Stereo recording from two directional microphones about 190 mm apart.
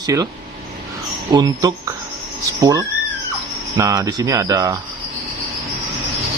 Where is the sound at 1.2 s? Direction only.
20° right (ahead or behind).